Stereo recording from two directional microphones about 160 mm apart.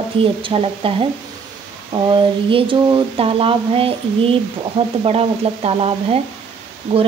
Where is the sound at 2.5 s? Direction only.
30° right (ahead or behind).